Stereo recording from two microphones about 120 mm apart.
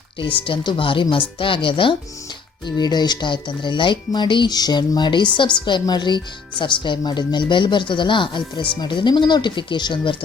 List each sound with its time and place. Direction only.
0.4 s speech: 45° left (ahead or behind)
2.6 s speech: 35° left (ahead or behind)